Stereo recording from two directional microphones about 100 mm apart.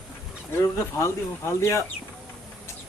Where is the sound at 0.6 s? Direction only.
25° left (ahead or behind).